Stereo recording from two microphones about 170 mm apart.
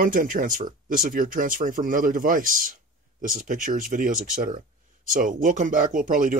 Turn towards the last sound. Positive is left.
turn(degrees=-50)  # may be behind; listen again after turning